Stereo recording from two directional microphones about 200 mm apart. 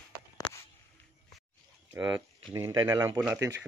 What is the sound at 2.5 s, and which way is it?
Speech, 15° right (ahead or behind).